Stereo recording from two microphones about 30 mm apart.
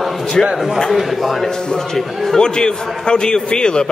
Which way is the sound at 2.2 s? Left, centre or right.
Left.